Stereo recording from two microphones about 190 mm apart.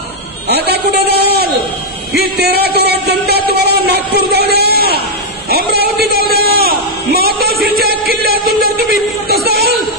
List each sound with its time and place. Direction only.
0.5 s speech: 55° right (ahead or behind)
2.1 s music: 55° right (ahead or behind)
5.5 s a man's voice: 55° right (ahead or behind)
9.3 s a sound: 55° right (ahead or behind)